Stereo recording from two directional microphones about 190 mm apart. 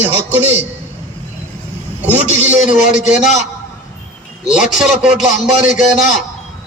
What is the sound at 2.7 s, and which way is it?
Speech, 40° left (ahead or behind).